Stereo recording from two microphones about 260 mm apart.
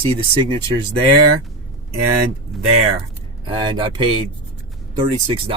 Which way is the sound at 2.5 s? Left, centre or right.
Centre.